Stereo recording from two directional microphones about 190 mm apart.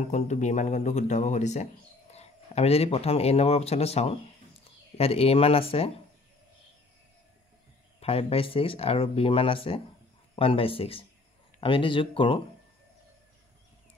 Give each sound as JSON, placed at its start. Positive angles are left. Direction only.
{"t": 0.1, "sound": "speech", "side_deg": 35}
{"t": 8.0, "sound": "speech", "side_deg": 30}